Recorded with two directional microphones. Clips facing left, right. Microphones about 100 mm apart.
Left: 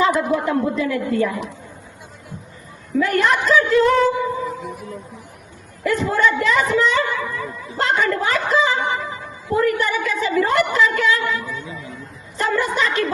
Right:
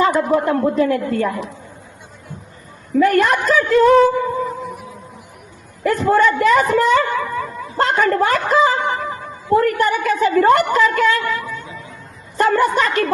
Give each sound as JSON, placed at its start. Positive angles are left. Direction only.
{"t": 0.0, "sound": "a woman's voice", "side_deg": -45}
{"t": 3.0, "sound": "a woman's voice", "side_deg": -50}
{"t": 4.4, "sound": "music", "side_deg": 0}
{"t": 5.8, "sound": "a woman's voice", "side_deg": -45}